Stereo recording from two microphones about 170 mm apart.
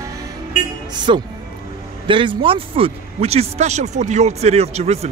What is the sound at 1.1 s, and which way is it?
A man's voice, 30° right (ahead or behind).